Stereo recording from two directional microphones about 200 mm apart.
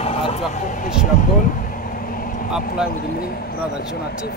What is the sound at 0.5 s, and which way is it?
Speech, 40° left (ahead or behind).